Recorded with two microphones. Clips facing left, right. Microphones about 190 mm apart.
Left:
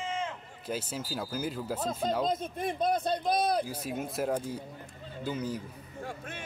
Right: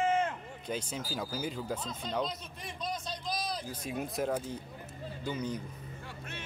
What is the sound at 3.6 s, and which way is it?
Speech, 10° left (ahead or behind).